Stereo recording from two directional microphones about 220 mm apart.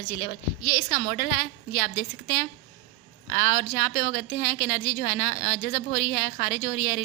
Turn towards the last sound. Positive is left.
turn(degrees=35)  # may be behind; listen again after turning